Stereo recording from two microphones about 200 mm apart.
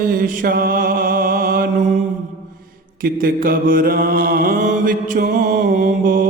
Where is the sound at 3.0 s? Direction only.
45° right (ahead or behind).